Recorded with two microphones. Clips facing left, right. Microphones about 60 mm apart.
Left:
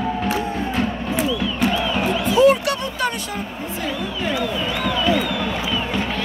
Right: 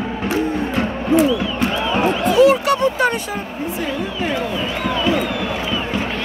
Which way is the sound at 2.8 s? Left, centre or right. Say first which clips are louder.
Right 7 dB; right.